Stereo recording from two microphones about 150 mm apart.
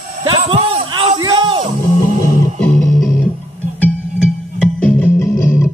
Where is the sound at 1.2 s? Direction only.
30° right (ahead or behind).